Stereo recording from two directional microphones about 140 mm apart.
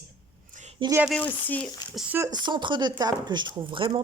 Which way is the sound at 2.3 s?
30° right (ahead or behind).